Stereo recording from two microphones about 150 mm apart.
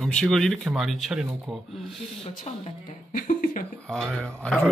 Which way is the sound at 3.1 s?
65° left (ahead or behind).